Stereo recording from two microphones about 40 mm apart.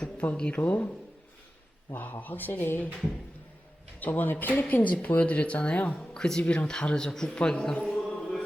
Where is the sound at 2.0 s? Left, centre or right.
Left.